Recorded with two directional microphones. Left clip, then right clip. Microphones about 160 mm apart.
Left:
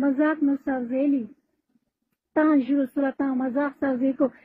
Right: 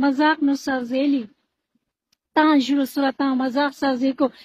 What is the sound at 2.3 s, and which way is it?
Speech, 30° right (ahead or behind).